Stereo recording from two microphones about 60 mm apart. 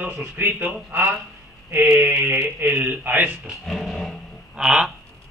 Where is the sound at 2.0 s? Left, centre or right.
Right.